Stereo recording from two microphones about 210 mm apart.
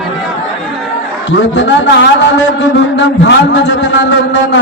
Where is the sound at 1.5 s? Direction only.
60° left (ahead or behind).